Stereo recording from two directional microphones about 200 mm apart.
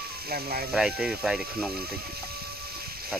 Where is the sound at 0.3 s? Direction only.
50° right (ahead or behind).